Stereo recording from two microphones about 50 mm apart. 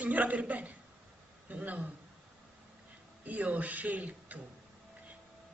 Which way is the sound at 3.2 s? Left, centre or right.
Right.